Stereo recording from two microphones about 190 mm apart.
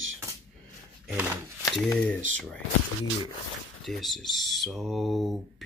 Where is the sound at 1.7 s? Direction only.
5° left (ahead or behind).